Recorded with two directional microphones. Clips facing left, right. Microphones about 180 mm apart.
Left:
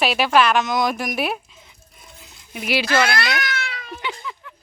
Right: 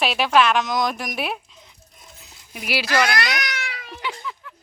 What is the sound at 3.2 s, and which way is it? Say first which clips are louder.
Cat: left 2 dB; 15° right (ahead or behind).